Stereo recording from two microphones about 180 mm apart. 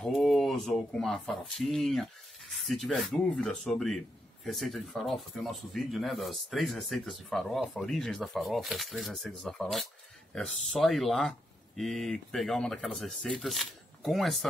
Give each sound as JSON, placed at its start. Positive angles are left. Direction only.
{"t": 0.0, "sound": "speech", "side_deg": 0}